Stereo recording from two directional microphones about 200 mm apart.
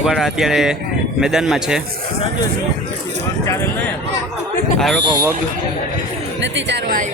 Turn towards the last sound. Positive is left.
turn(degrees=-60)  # may be behind; listen again after turning